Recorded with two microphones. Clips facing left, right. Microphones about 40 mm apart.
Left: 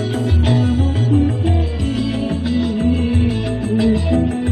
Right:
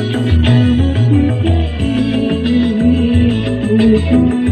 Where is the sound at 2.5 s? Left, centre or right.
Right.